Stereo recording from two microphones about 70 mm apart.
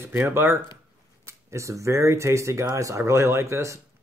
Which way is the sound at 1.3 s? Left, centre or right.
Right.